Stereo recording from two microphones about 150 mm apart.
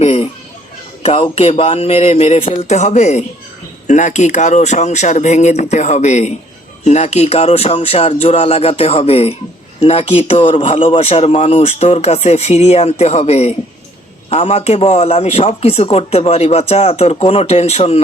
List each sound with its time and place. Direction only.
0.0 s children playing: 40° left (ahead or behind)
1.0 s a man's voice: 40° left (ahead or behind)